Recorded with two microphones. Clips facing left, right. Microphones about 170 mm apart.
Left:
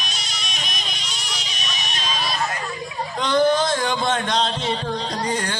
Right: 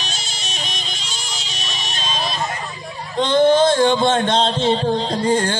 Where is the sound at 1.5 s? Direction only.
30° right (ahead or behind).